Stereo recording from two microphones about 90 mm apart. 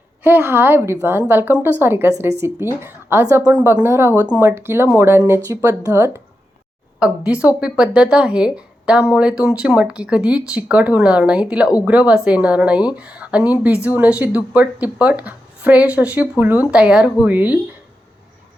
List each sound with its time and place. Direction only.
0.2 s a woman's voice: 25° right (ahead or behind)
7.0 s a woman's voice: 15° right (ahead or behind)